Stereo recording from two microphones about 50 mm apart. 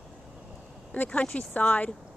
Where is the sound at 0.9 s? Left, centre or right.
Left.